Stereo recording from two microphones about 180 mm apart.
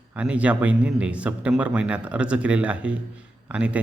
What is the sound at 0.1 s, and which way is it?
Speech, 5° right (ahead or behind).